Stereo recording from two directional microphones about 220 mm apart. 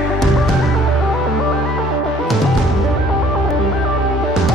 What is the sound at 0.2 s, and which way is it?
Music, centre (ahead or behind).